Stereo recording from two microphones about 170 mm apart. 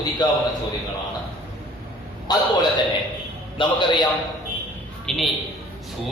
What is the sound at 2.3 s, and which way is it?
Speech, 25° left (ahead or behind).